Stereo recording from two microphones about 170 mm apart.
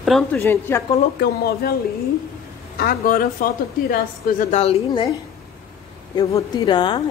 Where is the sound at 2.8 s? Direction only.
60° left (ahead or behind).